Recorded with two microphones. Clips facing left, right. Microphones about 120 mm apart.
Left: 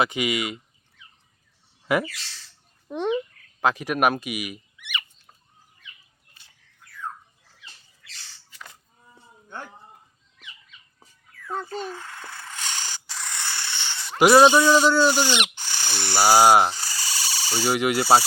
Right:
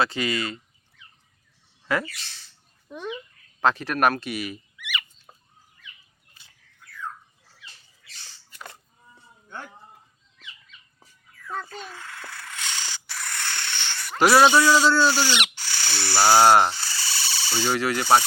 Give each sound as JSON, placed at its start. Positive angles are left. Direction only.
{"t": 0.0, "sound": "speech", "side_deg": 15}
{"t": 1.9, "sound": "speech", "side_deg": 20}
{"t": 2.9, "sound": "a child's voice", "side_deg": 70}
{"t": 3.6, "sound": "speech", "side_deg": 10}
{"t": 8.4, "sound": "livestock", "side_deg": -50}
{"t": 11.5, "sound": "a sound", "side_deg": 25}
{"t": 12.5, "sound": "a sound", "side_deg": 45}
{"t": 13.1, "sound": "rodents", "side_deg": 15}
{"t": 14.2, "sound": "speech", "side_deg": 20}